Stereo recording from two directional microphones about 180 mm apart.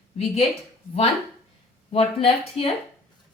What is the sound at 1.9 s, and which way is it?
Speech, 35° left (ahead or behind).